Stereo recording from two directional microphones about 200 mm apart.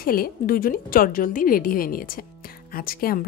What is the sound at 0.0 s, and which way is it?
A woman's voice, 45° left (ahead or behind).